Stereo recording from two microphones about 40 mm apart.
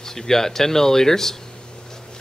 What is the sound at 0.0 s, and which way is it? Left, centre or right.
Speech, centre.